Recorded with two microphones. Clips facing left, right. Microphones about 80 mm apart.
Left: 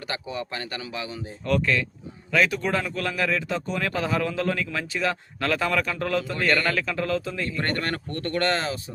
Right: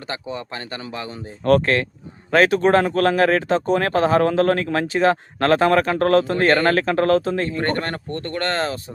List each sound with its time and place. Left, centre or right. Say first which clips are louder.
0.1 s speech: right 2 dB; right
0.9 s speech: right 3 dB; right
1.5 s speech: right 7 dB; right
6.3 s speech: right 7 dB; right
6.7 s speech: right 9 dB; right
7.4 s speech: right 5 dB; right